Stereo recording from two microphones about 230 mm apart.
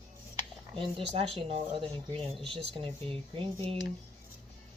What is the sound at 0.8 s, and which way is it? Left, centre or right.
Speech, right.